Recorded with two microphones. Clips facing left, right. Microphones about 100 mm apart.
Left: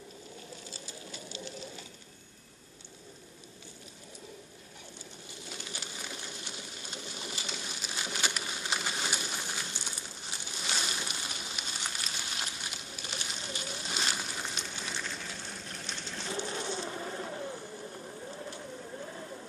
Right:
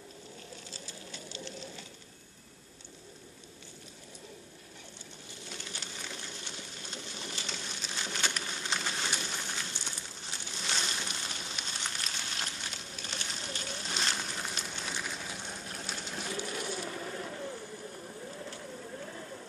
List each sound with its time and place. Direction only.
1.1 s sewing machine: 10° left (ahead or behind)
5.5 s pigeon: 10° left (ahead or behind)
14.4 s a sound: 5° right (ahead or behind)
16.2 s bird: 30° left (ahead or behind)